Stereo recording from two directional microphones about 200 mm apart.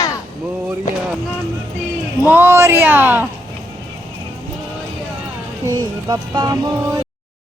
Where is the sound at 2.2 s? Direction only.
10° right (ahead or behind).